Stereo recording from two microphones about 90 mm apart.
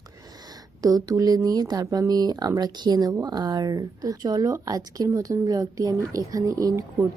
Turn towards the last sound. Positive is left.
turn(degrees=-35)  # may be behind; listen again after turning